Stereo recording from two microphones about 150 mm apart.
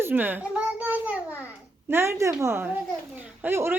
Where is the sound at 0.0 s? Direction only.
15° right (ahead or behind).